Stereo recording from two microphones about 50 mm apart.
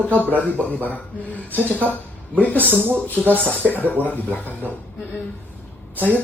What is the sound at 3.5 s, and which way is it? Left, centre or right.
Speech, left.